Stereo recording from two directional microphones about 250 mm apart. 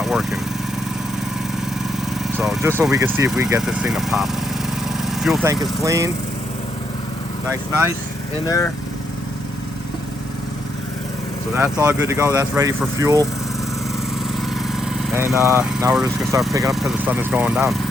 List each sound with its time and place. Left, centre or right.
0.0 s vehicle: centre
2.4 s speech: centre
5.0 s vehicle: centre
5.8 s speech: centre
7.4 s speech: centre
8.4 s speech: centre
11.5 s speech: centre
14.3 s vehicle: centre
16.7 s speech: centre